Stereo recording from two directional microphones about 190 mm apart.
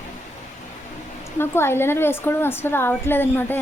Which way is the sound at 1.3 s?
10° left (ahead or behind).